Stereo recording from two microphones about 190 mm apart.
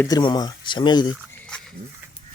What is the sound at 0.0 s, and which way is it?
Speech, 20° left (ahead or behind).